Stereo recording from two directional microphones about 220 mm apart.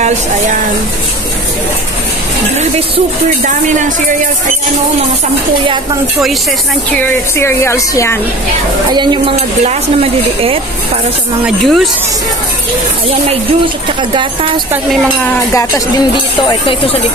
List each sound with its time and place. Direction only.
6.9 s a woman's voice: 10° left (ahead or behind)
8.9 s speech: 20° right (ahead or behind)
11.4 s speech: centre (ahead or behind)
16.4 s speech: 25° left (ahead or behind)